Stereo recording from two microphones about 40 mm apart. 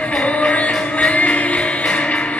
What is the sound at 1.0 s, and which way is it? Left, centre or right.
Music, left.